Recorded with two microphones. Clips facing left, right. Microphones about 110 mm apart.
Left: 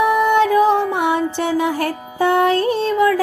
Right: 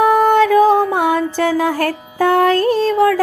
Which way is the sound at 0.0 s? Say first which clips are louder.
Right 3 dB; 45° right (ahead or behind).